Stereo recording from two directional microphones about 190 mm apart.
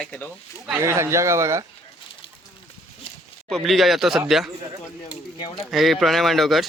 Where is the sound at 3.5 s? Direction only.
Centre (ahead or behind).